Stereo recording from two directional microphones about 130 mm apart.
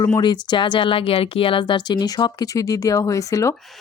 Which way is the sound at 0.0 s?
35° left (ahead or behind).